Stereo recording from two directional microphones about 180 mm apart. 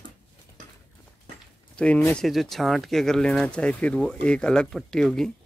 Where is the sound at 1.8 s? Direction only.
5° left (ahead or behind).